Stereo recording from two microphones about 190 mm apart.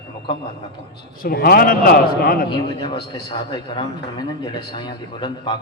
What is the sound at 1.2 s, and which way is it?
A man's voice, 50° left (ahead or behind).